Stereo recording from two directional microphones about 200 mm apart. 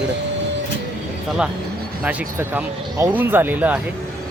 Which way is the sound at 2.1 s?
10° right (ahead or behind).